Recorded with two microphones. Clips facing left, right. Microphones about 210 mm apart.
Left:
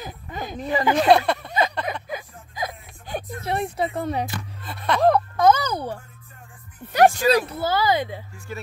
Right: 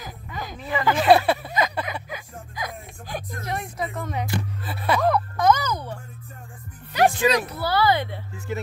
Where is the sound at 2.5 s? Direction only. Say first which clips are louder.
Left 3 dB; 25° left (ahead or behind).